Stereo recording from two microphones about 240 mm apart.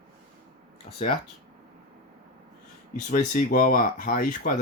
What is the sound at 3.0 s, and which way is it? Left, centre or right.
Speech, left.